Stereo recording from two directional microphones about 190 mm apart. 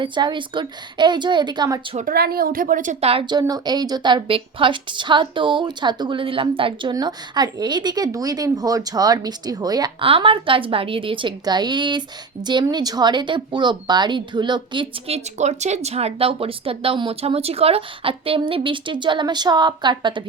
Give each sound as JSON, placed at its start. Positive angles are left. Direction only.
{"t": 0.0, "sound": "a woman's voice", "side_deg": -25}
{"t": 2.0, "sound": "a woman's voice", "side_deg": -50}